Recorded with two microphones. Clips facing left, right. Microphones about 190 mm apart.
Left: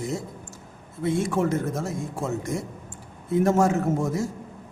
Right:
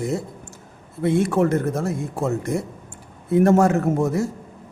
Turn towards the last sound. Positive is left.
turn(degrees=-65)  # may be behind; listen again after turning